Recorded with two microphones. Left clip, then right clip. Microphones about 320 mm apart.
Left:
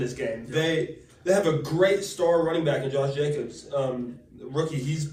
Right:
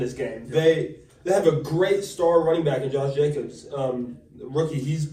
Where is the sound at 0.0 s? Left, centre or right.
Centre.